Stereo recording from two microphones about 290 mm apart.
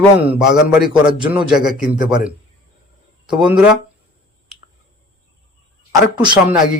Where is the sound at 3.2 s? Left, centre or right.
Centre.